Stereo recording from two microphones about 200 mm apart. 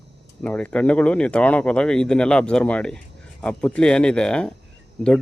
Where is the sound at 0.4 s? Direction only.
5° left (ahead or behind).